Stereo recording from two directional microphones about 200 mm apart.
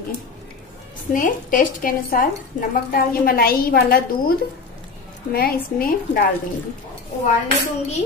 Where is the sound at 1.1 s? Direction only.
45° left (ahead or behind).